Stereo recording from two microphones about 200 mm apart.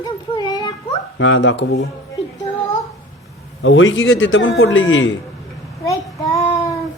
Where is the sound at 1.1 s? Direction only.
70° left (ahead or behind).